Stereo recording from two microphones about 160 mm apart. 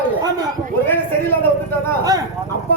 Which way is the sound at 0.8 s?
15° left (ahead or behind).